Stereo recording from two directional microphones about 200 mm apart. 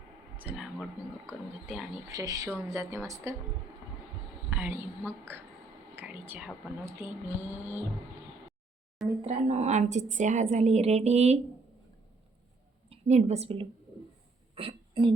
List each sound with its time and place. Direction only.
0.4 s speech: 5° right (ahead or behind)
2.0 s speech: 15° right (ahead or behind)
4.4 s a sound: 10° right (ahead or behind)
6.0 s speech: 10° right (ahead or behind)
9.2 s a woman's voice: 35° right (ahead or behind)
12.9 s a woman's voice: 35° right (ahead or behind)
14.5 s a sound: 25° right (ahead or behind)